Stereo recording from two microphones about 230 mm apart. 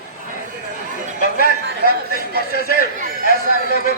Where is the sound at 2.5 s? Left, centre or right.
Left.